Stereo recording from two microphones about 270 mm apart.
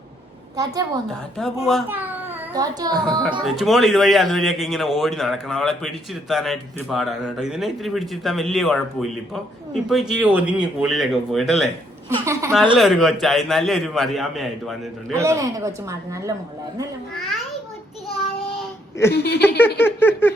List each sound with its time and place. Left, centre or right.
0.5 s a child's voice: centre
3.4 s a man's voice: centre
12.0 s speech: centre
12.7 s a man's voice: centre
15.1 s speech: centre
17.2 s babbling: centre
19.1 s speech: left
19.5 s a sound: centre